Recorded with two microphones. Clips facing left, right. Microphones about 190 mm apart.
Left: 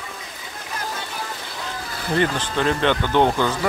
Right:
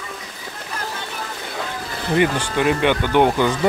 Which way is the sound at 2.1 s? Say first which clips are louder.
Right 3 dB; 10° right (ahead or behind).